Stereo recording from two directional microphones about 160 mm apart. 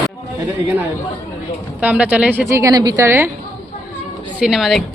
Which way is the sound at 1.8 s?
10° right (ahead or behind).